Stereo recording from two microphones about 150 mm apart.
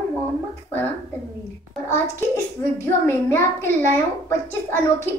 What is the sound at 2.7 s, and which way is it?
Speech, 15° left (ahead or behind).